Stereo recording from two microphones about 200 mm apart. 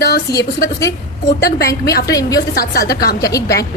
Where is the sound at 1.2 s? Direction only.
50° left (ahead or behind).